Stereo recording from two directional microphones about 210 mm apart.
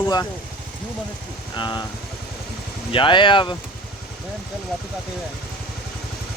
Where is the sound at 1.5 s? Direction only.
20° left (ahead or behind).